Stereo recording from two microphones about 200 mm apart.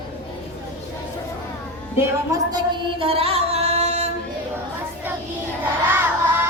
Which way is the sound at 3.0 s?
30° right (ahead or behind).